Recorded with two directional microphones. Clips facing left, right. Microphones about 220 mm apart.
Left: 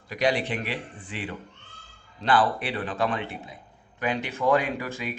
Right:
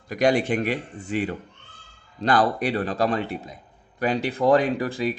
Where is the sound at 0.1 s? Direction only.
45° right (ahead or behind).